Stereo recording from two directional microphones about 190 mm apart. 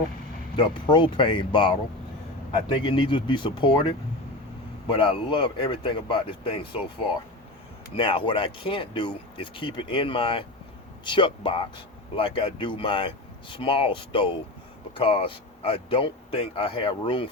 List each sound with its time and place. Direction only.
0.5 s speech: 25° left (ahead or behind)
7.9 s speech: 30° left (ahead or behind)